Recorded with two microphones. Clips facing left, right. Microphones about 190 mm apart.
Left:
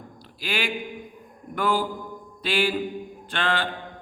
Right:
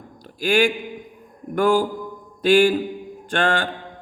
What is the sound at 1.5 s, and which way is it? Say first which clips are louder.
A man's voice: right 7 dB; 45° right (ahead or behind).